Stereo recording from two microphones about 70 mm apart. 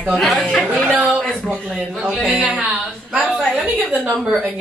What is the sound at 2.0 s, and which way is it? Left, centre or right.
Speech, centre.